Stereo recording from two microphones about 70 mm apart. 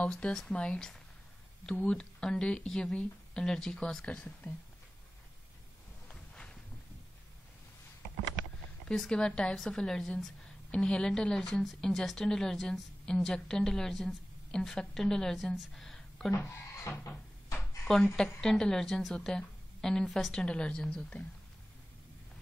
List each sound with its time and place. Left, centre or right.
0.0 s a woman's voice: centre
6.0 s a sound: centre
8.8 s a woman's voice: centre
16.3 s speech: left
17.8 s a woman's voice: centre